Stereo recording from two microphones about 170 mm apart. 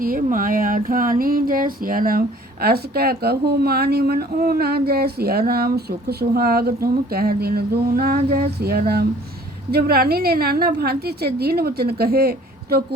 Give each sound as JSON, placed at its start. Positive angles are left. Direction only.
{"t": 0.0, "sound": "speech", "side_deg": -55}